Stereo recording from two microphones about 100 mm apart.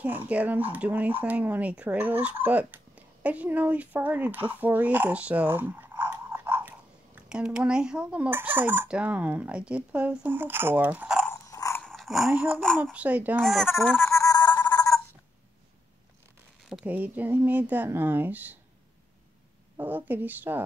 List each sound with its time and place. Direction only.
0.0 s speech: 20° right (ahead or behind)
7.2 s speech: 10° right (ahead or behind)
11.4 s gears: 35° left (ahead or behind)
11.8 s dog: centre (ahead or behind)
12.4 s speech: 5° left (ahead or behind)
12.9 s speech: 15° right (ahead or behind)
13.4 s speech: centre (ahead or behind)
14.0 s music: 30° left (ahead or behind)
16.8 s speech: 15° right (ahead or behind)
19.8 s speech: 20° right (ahead or behind)